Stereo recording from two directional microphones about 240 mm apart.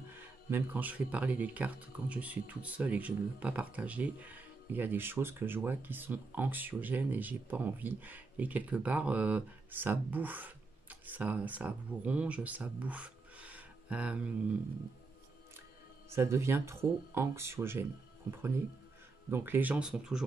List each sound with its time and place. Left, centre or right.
0.1 s speech: centre
16.1 s speech: centre
19.3 s speech: centre